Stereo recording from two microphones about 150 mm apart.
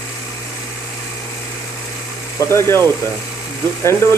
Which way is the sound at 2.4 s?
20° left (ahead or behind).